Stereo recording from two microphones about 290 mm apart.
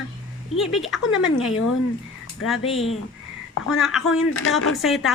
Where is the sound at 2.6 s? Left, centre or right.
Centre.